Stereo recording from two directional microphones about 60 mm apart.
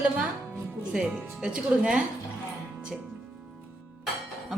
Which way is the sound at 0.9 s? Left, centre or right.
Centre.